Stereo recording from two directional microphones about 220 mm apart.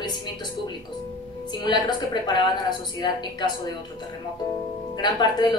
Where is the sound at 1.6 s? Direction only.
20° left (ahead or behind).